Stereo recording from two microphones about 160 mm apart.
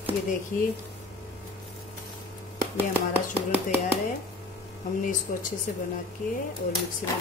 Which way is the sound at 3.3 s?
10° right (ahead or behind).